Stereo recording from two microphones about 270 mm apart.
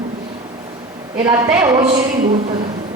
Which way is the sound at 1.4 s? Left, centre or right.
Centre.